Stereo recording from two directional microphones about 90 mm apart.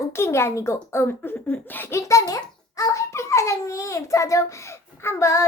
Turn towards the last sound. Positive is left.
turn(degrees=35)  # may be behind; listen again after turning